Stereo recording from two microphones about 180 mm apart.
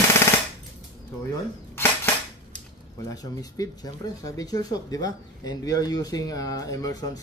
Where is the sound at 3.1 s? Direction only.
20° left (ahead or behind).